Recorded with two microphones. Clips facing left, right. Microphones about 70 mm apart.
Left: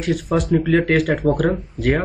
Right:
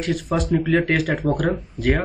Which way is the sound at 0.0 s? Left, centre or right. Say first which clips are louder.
Left 3 dB; centre.